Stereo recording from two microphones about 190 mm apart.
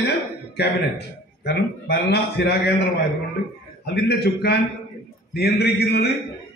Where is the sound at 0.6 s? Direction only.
60° left (ahead or behind).